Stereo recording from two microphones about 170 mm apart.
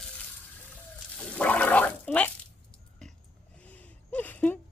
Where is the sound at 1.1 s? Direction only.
5° left (ahead or behind).